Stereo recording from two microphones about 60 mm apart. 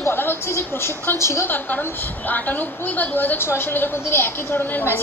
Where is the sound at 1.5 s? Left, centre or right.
Left.